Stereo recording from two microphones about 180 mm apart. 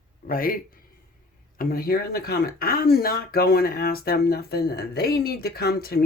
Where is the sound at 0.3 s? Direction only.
50° left (ahead or behind).